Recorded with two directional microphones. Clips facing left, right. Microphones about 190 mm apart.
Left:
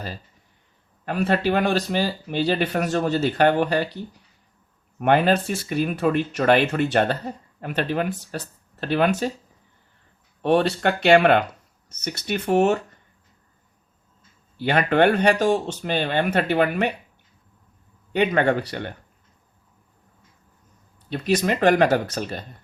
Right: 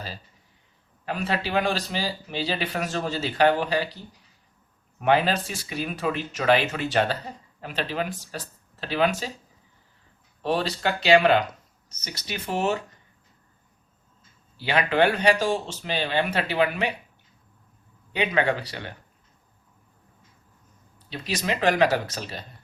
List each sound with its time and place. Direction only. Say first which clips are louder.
1.0 s speech: left 6 dB; 55° left (ahead or behind)
4.9 s speech: left 3 dB; 50° left (ahead or behind)
10.4 s speech: left 6 dB; 55° left (ahead or behind)
14.6 s speech: left 3 dB; 50° left (ahead or behind)
18.1 s speech: left 4 dB; 50° left (ahead or behind)
21.1 s speech: left 7 dB; 50° left (ahead or behind)